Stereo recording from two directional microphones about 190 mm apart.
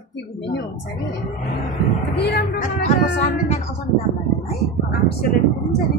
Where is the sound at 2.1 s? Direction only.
60° left (ahead or behind).